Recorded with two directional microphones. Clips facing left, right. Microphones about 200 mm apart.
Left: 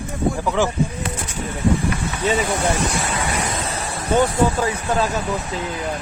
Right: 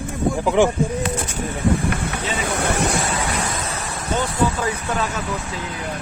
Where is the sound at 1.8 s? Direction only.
60° right (ahead or behind).